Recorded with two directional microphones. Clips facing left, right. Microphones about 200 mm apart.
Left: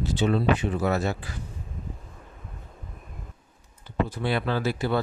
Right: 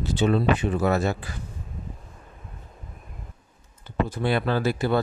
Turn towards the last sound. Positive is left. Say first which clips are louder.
# right 3 dB
turn(degrees=-45)  # may be behind; listen again after turning